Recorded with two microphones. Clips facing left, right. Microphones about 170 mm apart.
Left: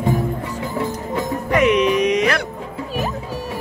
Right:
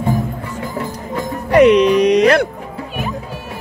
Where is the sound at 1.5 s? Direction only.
35° right (ahead or behind).